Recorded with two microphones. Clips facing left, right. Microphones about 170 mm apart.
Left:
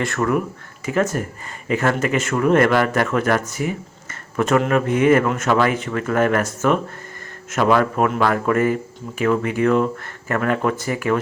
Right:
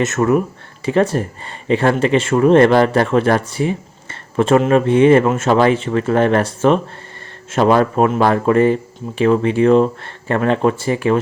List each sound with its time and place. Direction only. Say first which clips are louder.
0.0 s speech: right 5 dB; 25° right (ahead or behind)